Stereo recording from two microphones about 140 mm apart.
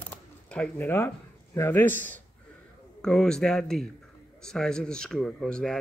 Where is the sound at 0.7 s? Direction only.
15° left (ahead or behind).